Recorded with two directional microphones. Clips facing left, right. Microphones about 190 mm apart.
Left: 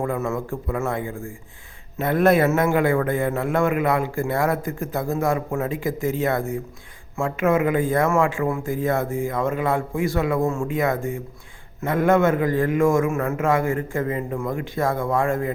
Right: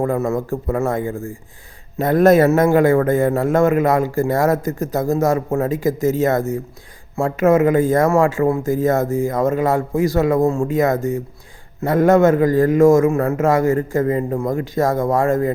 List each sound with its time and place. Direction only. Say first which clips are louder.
0.0 s a man's voice: right 5 dB; 40° right (ahead or behind)